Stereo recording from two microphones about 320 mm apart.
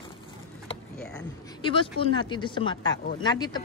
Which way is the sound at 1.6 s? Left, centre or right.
Centre.